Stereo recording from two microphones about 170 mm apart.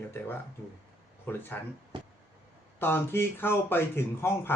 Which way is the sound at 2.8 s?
15° left (ahead or behind).